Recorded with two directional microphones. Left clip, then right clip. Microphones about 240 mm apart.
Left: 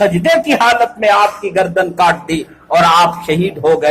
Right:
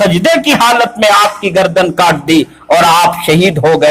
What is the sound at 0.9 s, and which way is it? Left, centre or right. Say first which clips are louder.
Speech: right 3 dB; right.